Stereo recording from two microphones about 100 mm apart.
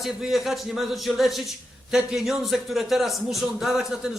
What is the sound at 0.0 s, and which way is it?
A man's voice, centre (ahead or behind).